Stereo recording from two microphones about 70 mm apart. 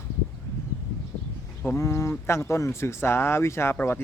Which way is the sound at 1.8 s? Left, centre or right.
Left.